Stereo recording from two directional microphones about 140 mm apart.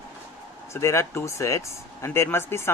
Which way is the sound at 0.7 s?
20° left (ahead or behind).